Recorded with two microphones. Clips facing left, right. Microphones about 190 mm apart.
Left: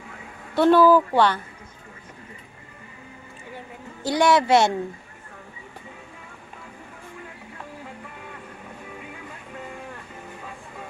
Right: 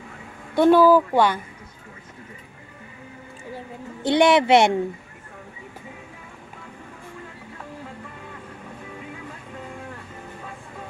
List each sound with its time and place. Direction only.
0.5 s speech: 15° right (ahead or behind)
4.0 s a woman's voice: 20° right (ahead or behind)